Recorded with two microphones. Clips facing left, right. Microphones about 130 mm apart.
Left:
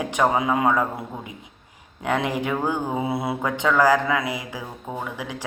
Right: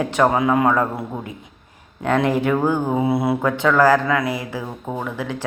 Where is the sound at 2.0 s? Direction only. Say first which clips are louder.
Right 6 dB; 15° left (ahead or behind).